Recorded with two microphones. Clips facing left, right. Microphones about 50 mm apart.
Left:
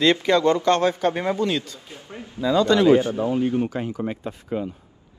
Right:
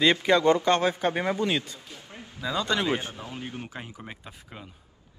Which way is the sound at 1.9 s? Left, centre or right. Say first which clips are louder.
Left 6 dB; left.